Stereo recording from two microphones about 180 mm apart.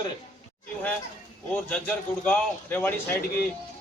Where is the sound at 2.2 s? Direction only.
10° left (ahead or behind).